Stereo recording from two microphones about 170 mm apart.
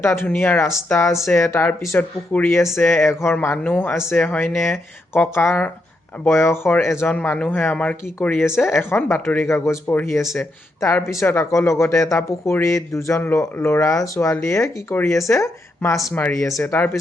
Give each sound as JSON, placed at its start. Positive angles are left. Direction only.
{"t": 0.0, "sound": "speech", "side_deg": 10}
{"t": 1.1, "sound": "speech", "side_deg": 0}
{"t": 1.4, "sound": "speech", "side_deg": 15}